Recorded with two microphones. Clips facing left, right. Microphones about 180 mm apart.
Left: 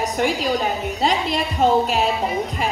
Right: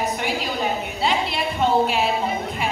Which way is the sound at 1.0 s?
40° left (ahead or behind).